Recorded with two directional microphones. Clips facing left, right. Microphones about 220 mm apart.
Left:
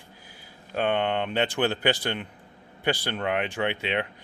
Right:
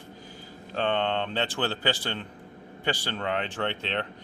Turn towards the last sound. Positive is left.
turn(degrees=10)  # may be behind; listen again after turning